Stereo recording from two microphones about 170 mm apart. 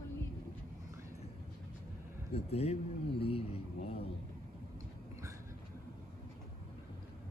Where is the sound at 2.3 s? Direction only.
35° left (ahead or behind).